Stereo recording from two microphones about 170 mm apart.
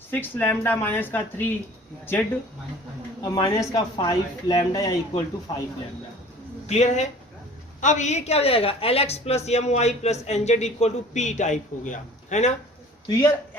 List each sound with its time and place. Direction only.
0.1 s speech: 10° left (ahead or behind)
3.2 s speech: 25° left (ahead or behind)
6.7 s a woman's voice: 40° left (ahead or behind)
13.1 s speech: 20° left (ahead or behind)